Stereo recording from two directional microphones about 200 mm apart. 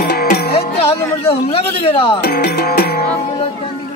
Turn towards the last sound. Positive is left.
turn(degrees=50)  # may be behind; listen again after turning